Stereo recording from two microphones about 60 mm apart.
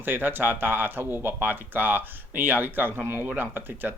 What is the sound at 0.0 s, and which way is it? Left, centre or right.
Speech, right.